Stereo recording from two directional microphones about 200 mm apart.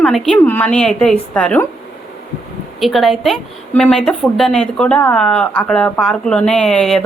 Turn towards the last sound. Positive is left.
turn(degrees=5)  # may be behind; listen again after turning